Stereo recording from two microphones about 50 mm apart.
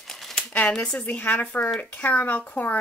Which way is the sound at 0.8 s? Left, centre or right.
Left.